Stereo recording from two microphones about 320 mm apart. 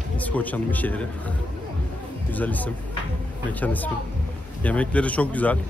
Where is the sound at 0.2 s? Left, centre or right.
Centre.